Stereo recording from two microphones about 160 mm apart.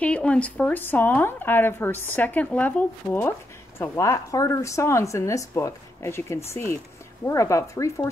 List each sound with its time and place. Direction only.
0.0 s speech: 5° left (ahead or behind)